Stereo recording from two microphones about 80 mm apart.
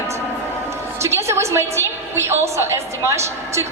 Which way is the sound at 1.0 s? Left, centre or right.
Right.